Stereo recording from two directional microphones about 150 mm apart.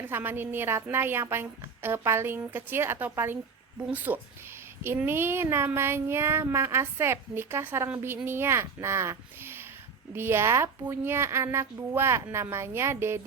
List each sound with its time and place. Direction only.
0.1 s a woman's voice: 15° right (ahead or behind)